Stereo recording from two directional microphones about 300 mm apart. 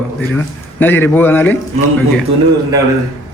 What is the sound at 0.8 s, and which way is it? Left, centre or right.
Speech, centre.